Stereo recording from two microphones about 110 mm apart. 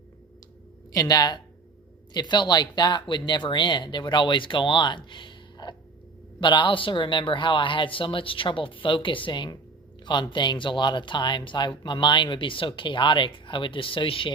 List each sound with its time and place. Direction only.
0.9 s speech: 35° left (ahead or behind); by 14.3 s 50° left (ahead or behind)